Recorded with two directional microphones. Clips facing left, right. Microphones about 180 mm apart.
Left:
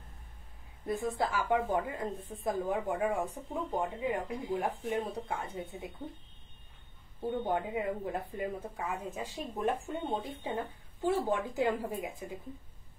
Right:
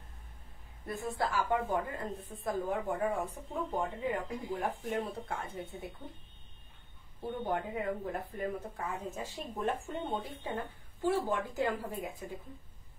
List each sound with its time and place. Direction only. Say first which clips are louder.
0.8 s speech: left 3 dB; 20° left (ahead or behind)
7.4 s speech: right 1 dB; 15° left (ahead or behind)